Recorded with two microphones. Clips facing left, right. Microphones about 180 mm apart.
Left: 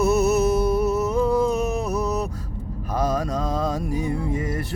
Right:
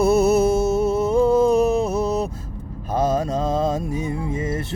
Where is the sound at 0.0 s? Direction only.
30° right (ahead or behind).